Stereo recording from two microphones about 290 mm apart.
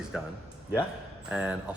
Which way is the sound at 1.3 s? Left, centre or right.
Centre.